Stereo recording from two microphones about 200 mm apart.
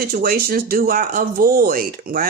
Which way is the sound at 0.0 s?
50° right (ahead or behind).